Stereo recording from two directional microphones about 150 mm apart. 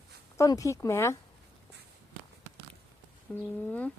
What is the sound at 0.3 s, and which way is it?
Speech, 20° left (ahead or behind).